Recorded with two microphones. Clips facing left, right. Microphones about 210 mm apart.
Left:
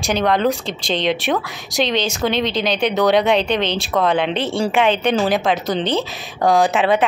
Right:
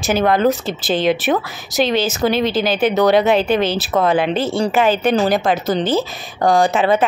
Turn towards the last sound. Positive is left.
turn(degrees=0)  # may be behind; listen again after turning